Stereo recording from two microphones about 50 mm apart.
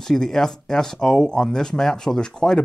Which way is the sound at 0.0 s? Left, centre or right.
Centre.